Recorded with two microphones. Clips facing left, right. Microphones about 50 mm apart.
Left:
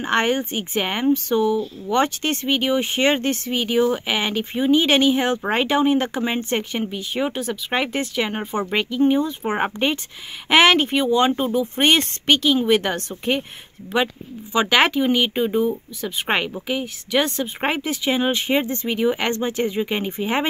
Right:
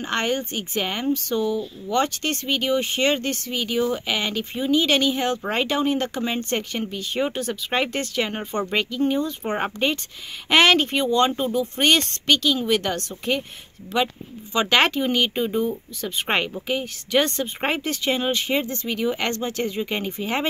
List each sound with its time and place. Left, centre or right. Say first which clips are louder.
0.0 s speech: left 4 dB; left
14.0 s speech: left 2 dB; centre
18.3 s speech: left 3 dB; left